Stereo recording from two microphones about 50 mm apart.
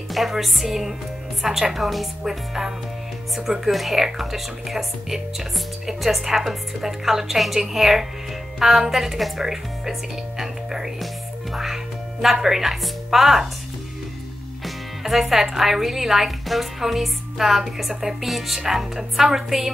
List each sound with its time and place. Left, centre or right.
0.1 s speech: centre
14.6 s speech: centre